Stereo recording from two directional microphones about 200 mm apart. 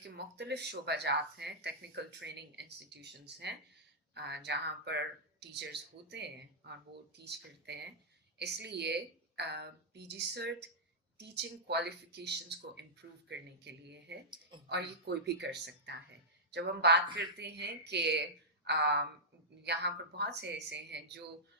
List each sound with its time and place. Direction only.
0.0 s speech: 60° right (ahead or behind)